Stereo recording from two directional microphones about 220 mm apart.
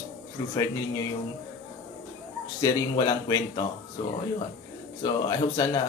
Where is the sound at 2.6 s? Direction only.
15° left (ahead or behind).